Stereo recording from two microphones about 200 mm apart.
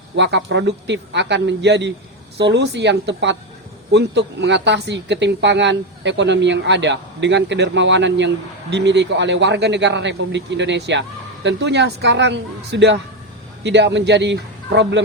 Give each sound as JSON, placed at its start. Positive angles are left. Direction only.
{"t": 0.2, "sound": "speech", "side_deg": -60}